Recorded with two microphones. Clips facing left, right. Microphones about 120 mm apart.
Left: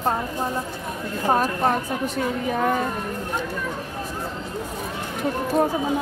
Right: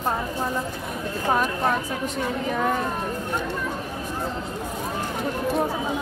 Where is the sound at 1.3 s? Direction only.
40° left (ahead or behind).